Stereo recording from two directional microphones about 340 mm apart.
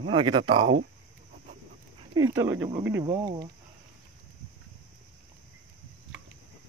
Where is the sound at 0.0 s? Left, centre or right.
Centre.